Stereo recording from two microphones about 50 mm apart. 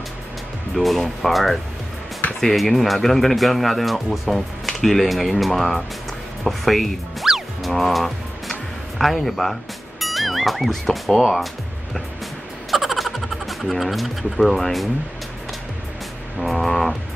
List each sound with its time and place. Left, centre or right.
0.7 s speech: centre
6.4 s music: centre
12.7 s a sound: centre
16.3 s speech: centre